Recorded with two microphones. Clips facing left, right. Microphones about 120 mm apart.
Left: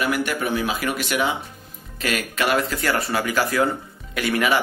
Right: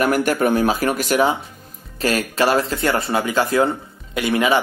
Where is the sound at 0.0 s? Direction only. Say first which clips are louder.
Right 6 dB; 45° right (ahead or behind).